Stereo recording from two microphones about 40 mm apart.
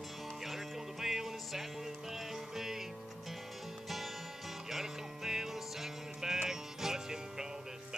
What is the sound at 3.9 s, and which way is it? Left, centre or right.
Music, centre.